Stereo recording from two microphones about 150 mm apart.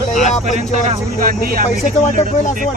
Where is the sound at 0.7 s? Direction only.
60° right (ahead or behind).